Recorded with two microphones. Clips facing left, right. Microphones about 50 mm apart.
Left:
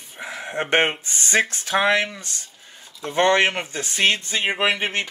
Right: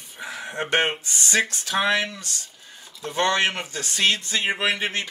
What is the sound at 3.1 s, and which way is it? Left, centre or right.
Speech, left.